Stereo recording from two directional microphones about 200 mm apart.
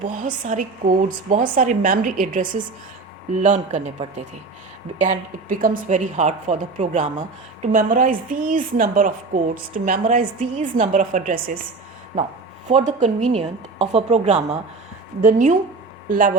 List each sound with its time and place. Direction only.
0.2 s speech: 40° right (ahead or behind)
4.9 s speech: 40° right (ahead or behind)
12.6 s speech: 35° right (ahead or behind)